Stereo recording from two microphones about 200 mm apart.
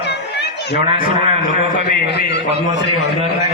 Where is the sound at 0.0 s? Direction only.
55° left (ahead or behind).